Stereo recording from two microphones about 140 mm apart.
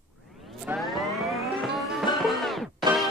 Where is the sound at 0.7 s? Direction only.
15° right (ahead or behind).